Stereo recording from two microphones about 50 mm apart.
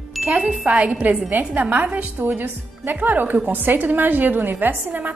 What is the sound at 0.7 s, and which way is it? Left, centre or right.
A woman's voice, right.